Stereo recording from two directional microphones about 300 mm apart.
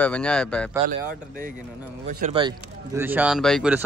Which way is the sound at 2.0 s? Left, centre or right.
Right.